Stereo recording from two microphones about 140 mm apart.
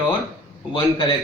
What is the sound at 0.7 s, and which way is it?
Speech, 30° left (ahead or behind).